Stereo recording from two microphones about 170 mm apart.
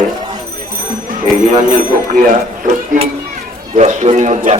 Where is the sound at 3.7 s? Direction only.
40° right (ahead or behind).